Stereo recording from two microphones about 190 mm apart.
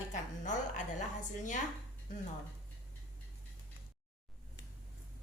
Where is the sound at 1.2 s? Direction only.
40° left (ahead or behind).